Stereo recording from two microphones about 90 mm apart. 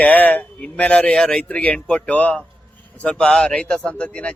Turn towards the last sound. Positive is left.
turn(degrees=15)  # may be behind; listen again after turning